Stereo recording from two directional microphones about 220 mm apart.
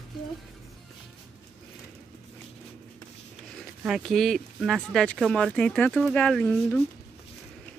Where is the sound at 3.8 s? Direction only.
Centre (ahead or behind).